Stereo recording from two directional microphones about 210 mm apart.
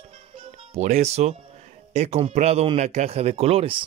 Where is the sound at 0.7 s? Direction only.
30° right (ahead or behind).